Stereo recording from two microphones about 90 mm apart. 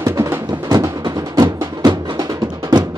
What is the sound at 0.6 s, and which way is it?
Music, 45° right (ahead or behind).